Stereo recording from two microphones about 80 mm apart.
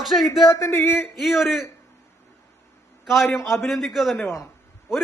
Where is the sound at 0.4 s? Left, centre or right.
Left.